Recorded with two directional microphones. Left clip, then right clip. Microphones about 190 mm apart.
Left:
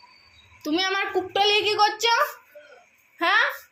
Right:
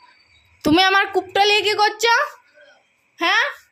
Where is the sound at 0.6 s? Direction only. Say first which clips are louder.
Right 9 dB; 55° right (ahead or behind).